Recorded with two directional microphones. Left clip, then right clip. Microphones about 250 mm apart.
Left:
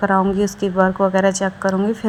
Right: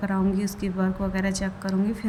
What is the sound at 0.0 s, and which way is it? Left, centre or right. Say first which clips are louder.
A woman's voice: left 11 dB; left.